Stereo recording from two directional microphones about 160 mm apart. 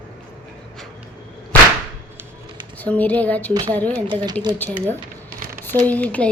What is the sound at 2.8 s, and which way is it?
Speech, 10° left (ahead or behind).